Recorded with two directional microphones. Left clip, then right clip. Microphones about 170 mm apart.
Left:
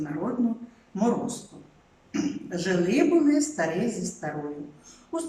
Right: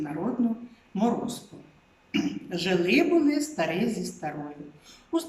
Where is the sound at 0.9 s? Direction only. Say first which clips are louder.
Even; 5° right (ahead or behind).